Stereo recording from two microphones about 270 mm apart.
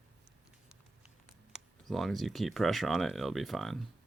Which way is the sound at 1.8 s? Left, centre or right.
Centre.